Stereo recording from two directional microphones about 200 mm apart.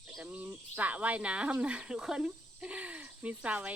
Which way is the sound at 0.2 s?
5° right (ahead or behind).